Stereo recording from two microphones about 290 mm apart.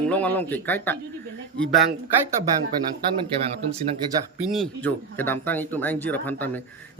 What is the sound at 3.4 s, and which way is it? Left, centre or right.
Speech, right.